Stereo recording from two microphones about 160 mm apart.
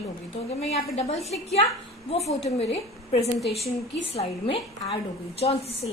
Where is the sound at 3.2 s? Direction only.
Centre (ahead or behind).